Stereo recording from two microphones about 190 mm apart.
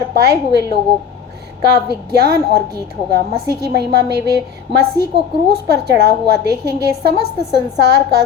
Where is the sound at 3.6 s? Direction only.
60° right (ahead or behind).